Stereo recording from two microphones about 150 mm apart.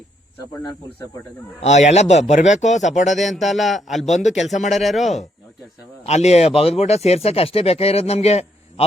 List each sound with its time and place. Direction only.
1.6 s speech: 50° left (ahead or behind)
3.2 s a man's voice: centre (ahead or behind)
4.0 s speech: 50° left (ahead or behind)
4.3 s a man's voice: centre (ahead or behind)
6.1 s speech: 45° left (ahead or behind)